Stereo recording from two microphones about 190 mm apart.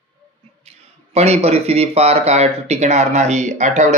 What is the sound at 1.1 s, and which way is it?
Speech, 35° right (ahead or behind).